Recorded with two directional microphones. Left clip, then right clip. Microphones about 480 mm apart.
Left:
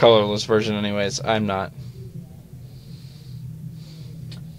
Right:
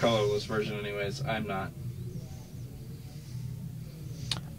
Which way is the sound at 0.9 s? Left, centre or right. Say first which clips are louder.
Left 12 dB; left.